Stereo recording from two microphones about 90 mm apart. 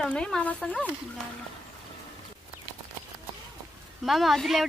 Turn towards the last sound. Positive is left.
turn(degrees=0)  # may be behind; listen again after turning